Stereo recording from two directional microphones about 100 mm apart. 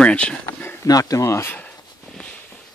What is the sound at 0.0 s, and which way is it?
Speech, 10° left (ahead or behind).